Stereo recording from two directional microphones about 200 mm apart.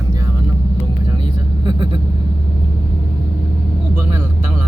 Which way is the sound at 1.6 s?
25° right (ahead or behind).